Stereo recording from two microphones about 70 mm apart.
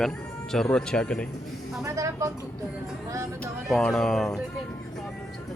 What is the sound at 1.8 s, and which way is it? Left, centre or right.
Speech, right.